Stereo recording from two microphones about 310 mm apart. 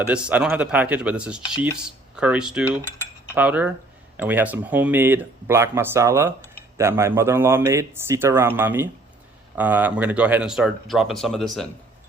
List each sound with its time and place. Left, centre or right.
0.1 s speech: centre